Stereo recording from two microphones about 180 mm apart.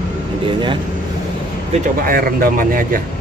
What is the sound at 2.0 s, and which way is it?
Speech, 55° right (ahead or behind).